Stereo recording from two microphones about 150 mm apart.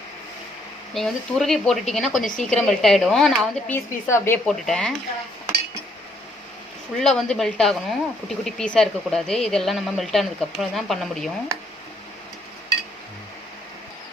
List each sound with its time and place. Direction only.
0.9 s speech: centre (ahead or behind)
4.0 s speech: 15° left (ahead or behind)
4.4 s speech: 5° left (ahead or behind)
6.9 s speech: 5° left (ahead or behind)